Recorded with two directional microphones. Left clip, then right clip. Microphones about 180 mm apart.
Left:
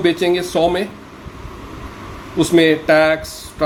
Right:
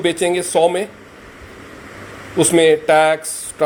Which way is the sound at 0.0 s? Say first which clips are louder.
Left 1 dB; 15° right (ahead or behind).